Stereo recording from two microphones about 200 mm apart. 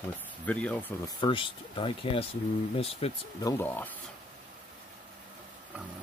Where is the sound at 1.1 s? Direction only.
25° left (ahead or behind).